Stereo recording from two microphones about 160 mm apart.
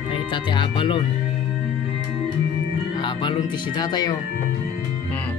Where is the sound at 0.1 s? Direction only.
30° left (ahead or behind).